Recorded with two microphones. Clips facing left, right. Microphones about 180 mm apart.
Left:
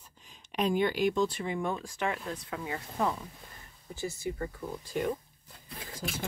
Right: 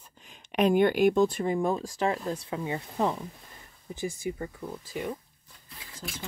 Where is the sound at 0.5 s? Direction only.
65° right (ahead or behind); by 4.5 s 15° right (ahead or behind).